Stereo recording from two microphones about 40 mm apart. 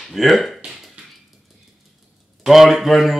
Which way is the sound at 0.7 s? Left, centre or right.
Centre.